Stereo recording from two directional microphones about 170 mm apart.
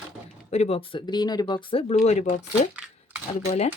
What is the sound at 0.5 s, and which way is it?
Speech, 40° left (ahead or behind).